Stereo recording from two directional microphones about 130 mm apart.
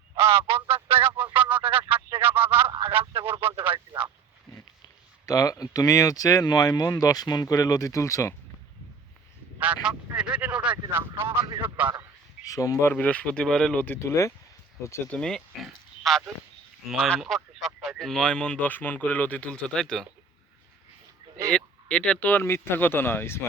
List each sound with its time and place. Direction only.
0.2 s honk: 45° right (ahead or behind)
1.3 s a sound: 15° right (ahead or behind)
2.6 s a sound: 45° right (ahead or behind)
3.1 s radio: 40° right (ahead or behind)
5.2 s speech: 25° left (ahead or behind)
9.6 s a sound: 10° right (ahead or behind)
11.8 s a man's voice: 15° right (ahead or behind)
12.5 s speech: 25° left (ahead or behind)
12.9 s speech: 10° left (ahead or behind)
15.1 s speech: 5° left (ahead or behind)
21.5 s speech: 5° left (ahead or behind)